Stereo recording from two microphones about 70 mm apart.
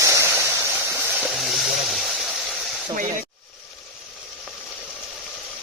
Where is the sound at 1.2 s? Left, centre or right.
Centre.